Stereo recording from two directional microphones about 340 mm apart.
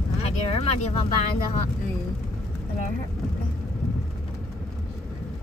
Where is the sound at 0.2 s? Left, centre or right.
Centre.